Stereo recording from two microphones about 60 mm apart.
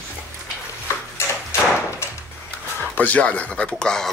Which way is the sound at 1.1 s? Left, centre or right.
Left.